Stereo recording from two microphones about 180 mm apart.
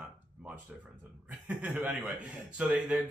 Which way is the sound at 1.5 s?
5° right (ahead or behind).